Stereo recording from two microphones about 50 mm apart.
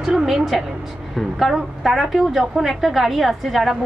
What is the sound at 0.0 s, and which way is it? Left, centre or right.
A woman's voice, centre.